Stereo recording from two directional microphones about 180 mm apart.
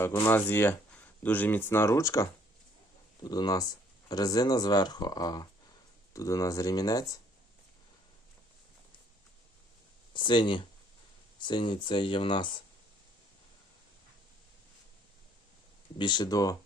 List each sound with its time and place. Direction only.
0.0 s speech: 10° left (ahead or behind)
10.2 s speech: 25° left (ahead or behind)
16.0 s speech: 25° left (ahead or behind)